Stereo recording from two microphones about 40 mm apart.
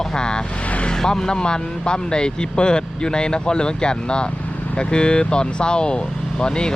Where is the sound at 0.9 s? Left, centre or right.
Centre.